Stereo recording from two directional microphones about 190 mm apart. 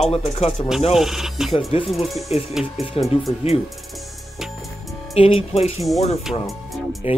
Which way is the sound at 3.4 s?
30° left (ahead or behind).